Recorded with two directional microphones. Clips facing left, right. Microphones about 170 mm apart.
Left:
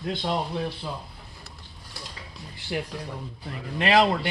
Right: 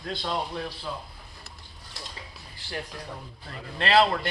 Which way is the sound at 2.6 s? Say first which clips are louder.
Left 6 dB; 20° left (ahead or behind).